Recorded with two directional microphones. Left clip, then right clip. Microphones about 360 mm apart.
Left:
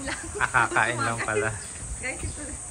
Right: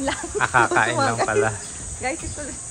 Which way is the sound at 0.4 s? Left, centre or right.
Centre.